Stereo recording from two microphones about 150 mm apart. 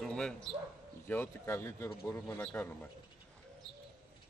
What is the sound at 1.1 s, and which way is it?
Speech, 15° left (ahead or behind).